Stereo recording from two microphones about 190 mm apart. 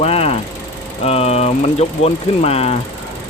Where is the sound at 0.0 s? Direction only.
30° left (ahead or behind).